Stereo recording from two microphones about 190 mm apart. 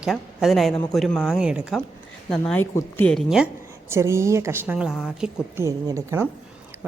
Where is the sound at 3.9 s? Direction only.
15° right (ahead or behind).